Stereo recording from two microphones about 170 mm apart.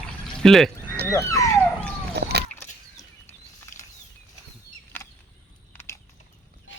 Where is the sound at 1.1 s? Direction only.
15° left (ahead or behind).